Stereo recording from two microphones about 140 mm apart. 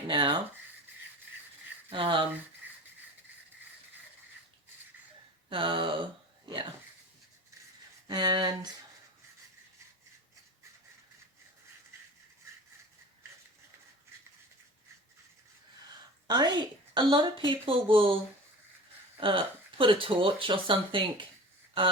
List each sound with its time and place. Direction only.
0.1 s a woman's voice: 35° right (ahead or behind)
1.9 s a woman's voice: 35° right (ahead or behind)
5.5 s a woman's voice: 35° right (ahead or behind)
6.4 s a sound: 35° right (ahead or behind)
8.0 s speech: 30° right (ahead or behind)
16.2 s a woman's voice: 30° right (ahead or behind)
19.8 s a woman's voice: 40° right (ahead or behind)